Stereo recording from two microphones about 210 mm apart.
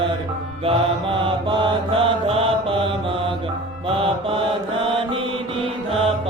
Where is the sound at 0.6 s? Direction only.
25° right (ahead or behind).